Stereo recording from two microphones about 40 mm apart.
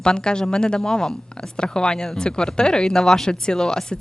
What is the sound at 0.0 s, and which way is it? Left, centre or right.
A woman's voice, left.